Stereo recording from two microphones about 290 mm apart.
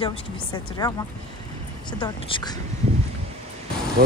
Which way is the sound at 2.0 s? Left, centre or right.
Centre.